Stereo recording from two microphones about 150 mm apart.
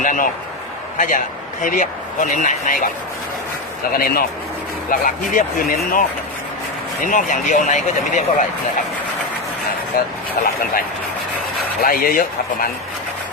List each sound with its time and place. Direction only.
0.0 s a sound: 60° left (ahead or behind)
0.9 s speech: 60° left (ahead or behind)
3.9 s speech: 80° left
4.9 s speech: 65° left (ahead or behind)
10.4 s speech: 75° left (ahead or behind)
11.8 s speech: 75° left (ahead or behind)